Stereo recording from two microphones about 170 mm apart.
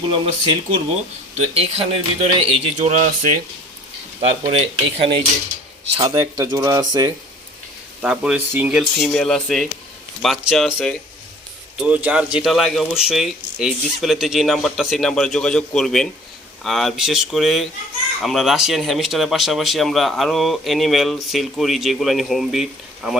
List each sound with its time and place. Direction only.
0.1 s speech: 35° right (ahead or behind)
4.2 s speech: 35° right (ahead or behind)
8.0 s speech: 5° right (ahead or behind)
9.0 s speech: 5° left (ahead or behind)
11.8 s speech: 10° right (ahead or behind)